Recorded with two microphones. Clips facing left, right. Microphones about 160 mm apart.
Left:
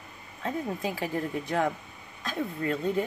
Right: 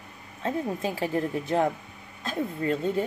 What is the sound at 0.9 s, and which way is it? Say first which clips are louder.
Speech: right 3 dB; 25° right (ahead or behind).